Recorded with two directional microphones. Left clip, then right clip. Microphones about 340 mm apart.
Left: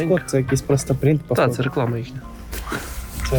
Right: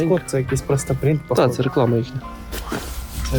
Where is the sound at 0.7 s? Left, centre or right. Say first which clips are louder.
Left 1 dB; centre.